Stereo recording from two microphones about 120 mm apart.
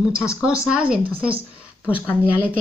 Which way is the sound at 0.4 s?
5° right (ahead or behind).